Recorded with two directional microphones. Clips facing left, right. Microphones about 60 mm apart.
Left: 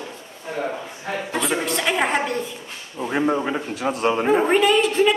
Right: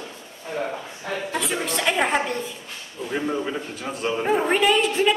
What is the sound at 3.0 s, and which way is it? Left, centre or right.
Speech, left.